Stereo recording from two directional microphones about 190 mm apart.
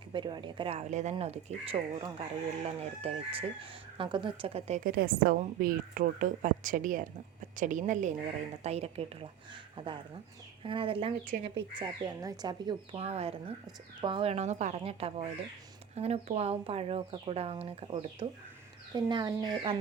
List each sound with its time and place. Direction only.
0.1 s speech: 25° right (ahead or behind)
4.8 s speech: 50° right (ahead or behind); by 19.7 s 20° right (ahead or behind)